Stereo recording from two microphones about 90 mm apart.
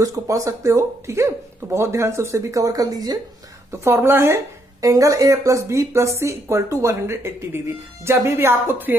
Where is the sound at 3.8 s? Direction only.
25° right (ahead or behind).